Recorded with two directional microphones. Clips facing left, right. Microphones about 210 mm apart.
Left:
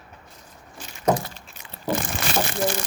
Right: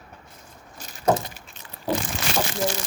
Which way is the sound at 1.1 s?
25° right (ahead or behind).